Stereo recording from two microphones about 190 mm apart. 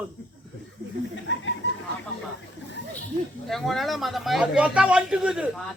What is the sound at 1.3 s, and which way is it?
Speech, 70° left (ahead or behind).